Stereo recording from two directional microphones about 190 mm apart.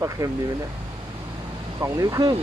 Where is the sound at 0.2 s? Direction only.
20° right (ahead or behind).